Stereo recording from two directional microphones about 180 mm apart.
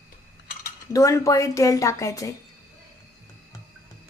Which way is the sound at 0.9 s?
15° left (ahead or behind).